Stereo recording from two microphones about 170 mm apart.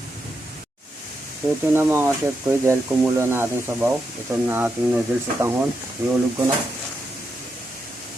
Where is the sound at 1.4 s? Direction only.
20° right (ahead or behind).